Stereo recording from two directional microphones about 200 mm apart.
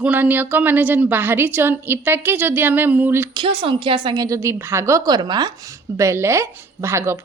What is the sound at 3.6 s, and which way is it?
A woman's voice, 25° right (ahead or behind).